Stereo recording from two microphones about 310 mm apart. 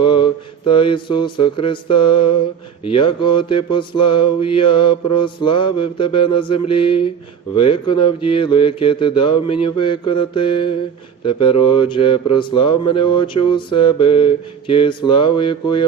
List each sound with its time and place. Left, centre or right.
0.0 s mantra: centre
0.7 s speech: centre